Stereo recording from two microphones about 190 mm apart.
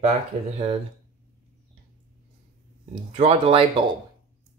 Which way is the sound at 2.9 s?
30° right (ahead or behind).